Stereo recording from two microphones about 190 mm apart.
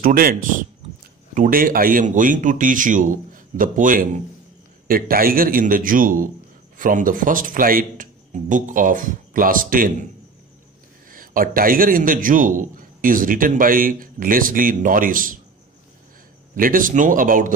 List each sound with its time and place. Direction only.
0.0 s a man's voice: 50° right (ahead or behind)
11.1 s a man's voice: 45° right (ahead or behind)
16.5 s a man's voice: 45° right (ahead or behind)